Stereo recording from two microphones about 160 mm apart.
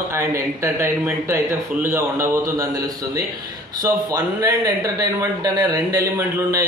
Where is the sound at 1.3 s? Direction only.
15° right (ahead or behind).